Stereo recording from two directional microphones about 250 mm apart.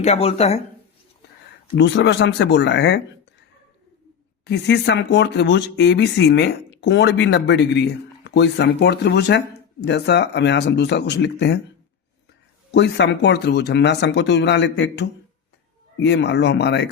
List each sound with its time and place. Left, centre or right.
0.0 s speech: left
1.7 s speech: left
4.4 s speech: left
12.7 s speech: left